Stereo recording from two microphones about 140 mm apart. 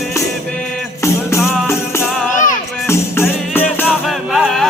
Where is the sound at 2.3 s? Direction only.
65° left (ahead or behind).